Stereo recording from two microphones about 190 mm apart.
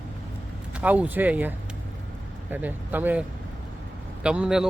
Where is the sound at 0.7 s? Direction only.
5° right (ahead or behind).